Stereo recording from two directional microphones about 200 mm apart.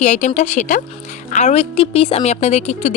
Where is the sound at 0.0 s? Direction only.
35° left (ahead or behind).